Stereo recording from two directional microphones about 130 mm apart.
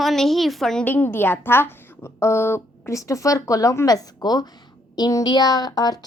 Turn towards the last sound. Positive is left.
turn(degrees=30)  # may be behind; listen again after turning